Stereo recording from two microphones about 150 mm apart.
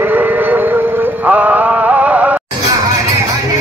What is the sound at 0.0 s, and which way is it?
Music, 15° right (ahead or behind).